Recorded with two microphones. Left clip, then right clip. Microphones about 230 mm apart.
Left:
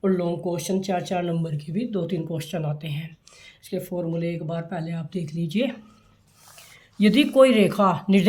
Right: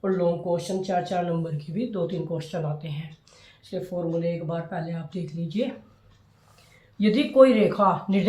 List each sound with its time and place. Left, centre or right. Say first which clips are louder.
0.0 s speech: even; left
7.0 s speech: left 1 dB; left